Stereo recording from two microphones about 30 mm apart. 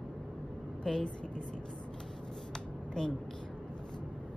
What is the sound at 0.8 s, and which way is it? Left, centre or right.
Speech, left.